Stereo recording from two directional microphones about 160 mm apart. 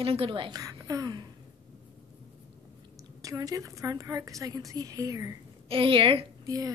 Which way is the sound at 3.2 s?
20° right (ahead or behind).